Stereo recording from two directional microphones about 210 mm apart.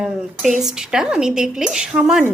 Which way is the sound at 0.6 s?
5° right (ahead or behind).